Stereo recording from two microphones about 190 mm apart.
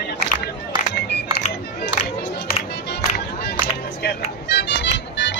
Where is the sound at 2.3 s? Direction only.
60° left (ahead or behind).